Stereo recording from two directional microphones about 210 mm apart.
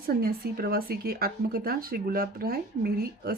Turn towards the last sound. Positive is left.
turn(degrees=-45)  # may be behind; listen again after turning